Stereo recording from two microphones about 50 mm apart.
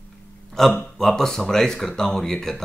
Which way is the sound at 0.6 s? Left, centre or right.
Centre.